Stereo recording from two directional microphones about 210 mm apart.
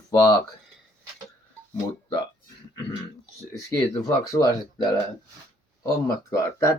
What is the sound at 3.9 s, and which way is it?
Speech, 20° left (ahead or behind).